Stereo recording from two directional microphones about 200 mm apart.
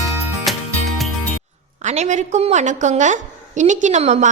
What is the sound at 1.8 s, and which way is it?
A woman's voice, 35° right (ahead or behind).